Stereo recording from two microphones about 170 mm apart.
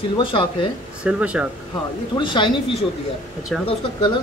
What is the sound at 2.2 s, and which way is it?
Speech, 25° left (ahead or behind).